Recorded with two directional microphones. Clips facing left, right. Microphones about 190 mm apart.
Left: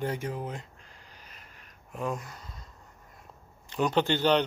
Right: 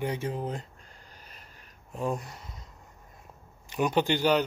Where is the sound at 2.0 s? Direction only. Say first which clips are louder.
Right 2 dB; 30° right (ahead or behind).